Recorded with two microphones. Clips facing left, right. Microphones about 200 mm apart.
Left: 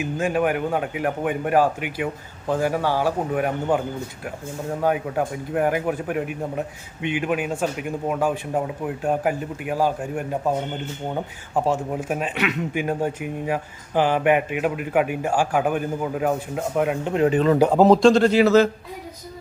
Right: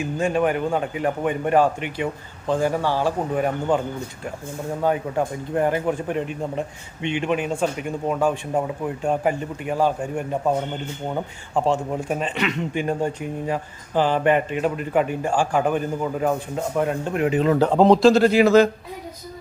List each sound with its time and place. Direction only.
0.0 s a man's voice: 5° left (ahead or behind)
4.8 s a man's voice: 10° left (ahead or behind)
11.5 s a man's voice: 5° left (ahead or behind)
17.2 s speech: 40° left (ahead or behind)
17.6 s a man's voice: 5° left (ahead or behind); by 18.7 s 15° right (ahead or behind)